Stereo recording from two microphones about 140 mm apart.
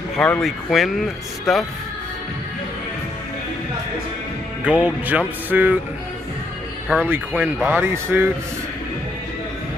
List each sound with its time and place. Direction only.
0.1 s speech: 5° left (ahead or behind)
4.6 s speech: 10° right (ahead or behind)
6.9 s speech: 15° right (ahead or behind)